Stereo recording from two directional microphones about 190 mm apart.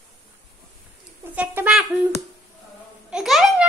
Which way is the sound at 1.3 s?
10° right (ahead or behind).